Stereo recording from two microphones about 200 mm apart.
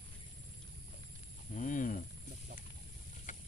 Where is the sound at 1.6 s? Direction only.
40° left (ahead or behind).